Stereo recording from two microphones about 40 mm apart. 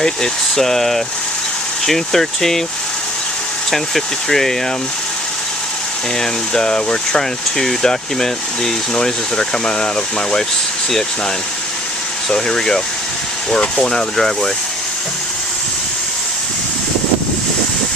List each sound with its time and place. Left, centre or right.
0.0 s speech: centre
3.7 s speech: centre
6.1 s speech: centre
12.3 s speech: centre